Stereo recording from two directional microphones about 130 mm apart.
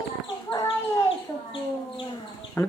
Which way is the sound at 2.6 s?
20° left (ahead or behind).